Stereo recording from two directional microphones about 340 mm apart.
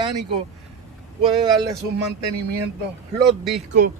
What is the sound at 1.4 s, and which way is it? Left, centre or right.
Speech, centre.